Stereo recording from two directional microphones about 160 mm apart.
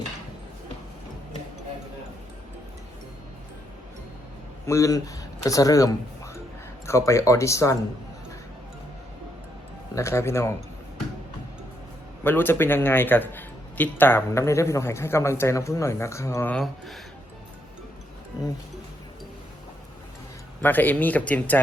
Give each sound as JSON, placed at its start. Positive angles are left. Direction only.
{"t": 4.6, "sound": "speech", "side_deg": 20}
{"t": 9.9, "sound": "a man's voice", "side_deg": 15}
{"t": 12.2, "sound": "a man's voice", "side_deg": 15}
{"t": 16.6, "sound": "speech", "side_deg": 0}
{"t": 20.6, "sound": "a man's voice", "side_deg": 10}